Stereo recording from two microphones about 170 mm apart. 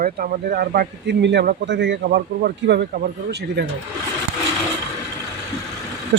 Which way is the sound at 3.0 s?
70° right (ahead or behind).